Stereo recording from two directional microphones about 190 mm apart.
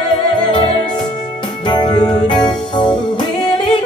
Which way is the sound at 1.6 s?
20° left (ahead or behind).